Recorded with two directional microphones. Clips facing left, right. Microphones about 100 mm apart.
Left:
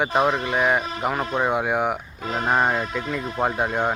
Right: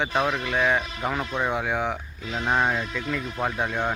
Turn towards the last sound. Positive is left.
turn(degrees=25)  # may be behind; listen again after turning